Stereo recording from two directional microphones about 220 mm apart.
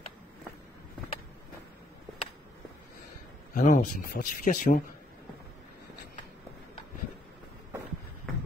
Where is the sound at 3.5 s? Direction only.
35° left (ahead or behind).